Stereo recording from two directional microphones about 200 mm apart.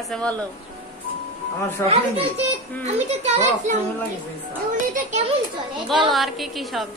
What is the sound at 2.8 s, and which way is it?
Speech, 35° right (ahead or behind).